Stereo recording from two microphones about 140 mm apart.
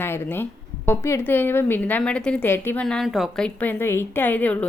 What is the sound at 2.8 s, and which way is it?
A woman's voice, 5° left (ahead or behind).